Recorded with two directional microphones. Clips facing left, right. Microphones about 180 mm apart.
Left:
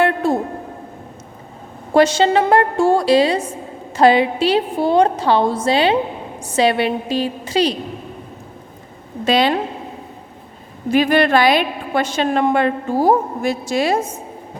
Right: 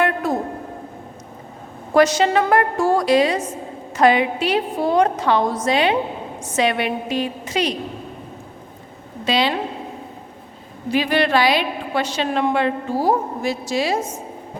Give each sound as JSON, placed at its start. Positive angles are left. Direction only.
{"t": 0.0, "sound": "a sound", "side_deg": 30}
{"t": 1.9, "sound": "a woman's voice", "side_deg": 30}
{"t": 9.2, "sound": "a woman's voice", "side_deg": 50}
{"t": 10.9, "sound": "a woman's voice", "side_deg": 50}